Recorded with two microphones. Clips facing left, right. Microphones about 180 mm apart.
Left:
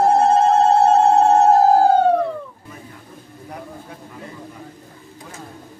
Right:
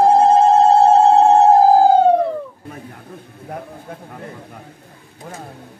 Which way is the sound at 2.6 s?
60° right (ahead or behind).